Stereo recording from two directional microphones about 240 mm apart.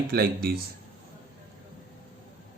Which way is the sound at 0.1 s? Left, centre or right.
Right.